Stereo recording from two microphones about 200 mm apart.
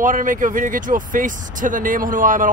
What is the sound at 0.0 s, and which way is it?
Speech, 40° right (ahead or behind).